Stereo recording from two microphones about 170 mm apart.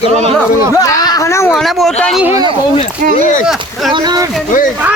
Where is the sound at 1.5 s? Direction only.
Centre (ahead or behind).